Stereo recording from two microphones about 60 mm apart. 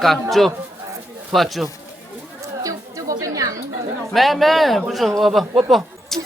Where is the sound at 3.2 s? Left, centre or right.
Right.